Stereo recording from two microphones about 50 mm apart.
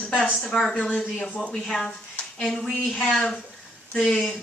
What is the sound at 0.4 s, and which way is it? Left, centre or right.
Speech, centre.